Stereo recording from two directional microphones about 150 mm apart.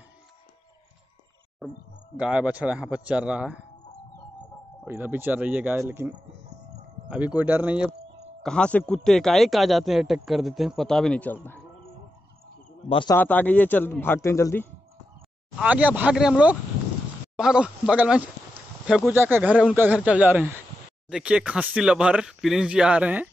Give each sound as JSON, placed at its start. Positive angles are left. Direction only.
{"t": 1.6, "sound": "speech", "side_deg": 0}
{"t": 4.8, "sound": "speech", "side_deg": -15}
{"t": 8.4, "sound": "speech", "side_deg": 5}
{"t": 12.8, "sound": "speech", "side_deg": 35}
{"t": 13.1, "sound": "a man's voice", "side_deg": 10}
{"t": 15.6, "sound": "speech", "side_deg": -10}